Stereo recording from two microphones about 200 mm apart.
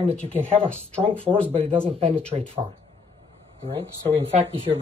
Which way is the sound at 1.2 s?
30° right (ahead or behind).